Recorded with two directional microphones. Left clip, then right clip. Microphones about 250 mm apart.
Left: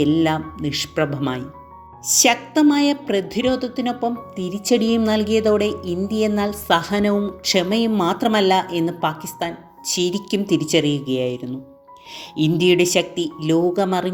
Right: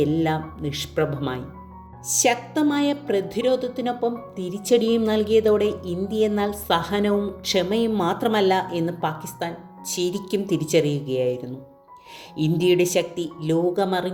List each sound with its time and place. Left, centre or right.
0.0 s a woman's voice: left
13.1 s speech: centre
13.5 s a woman's voice: centre